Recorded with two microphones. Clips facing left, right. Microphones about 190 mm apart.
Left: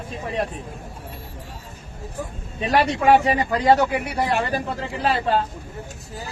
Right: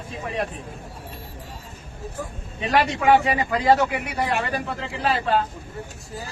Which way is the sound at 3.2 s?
35° left (ahead or behind).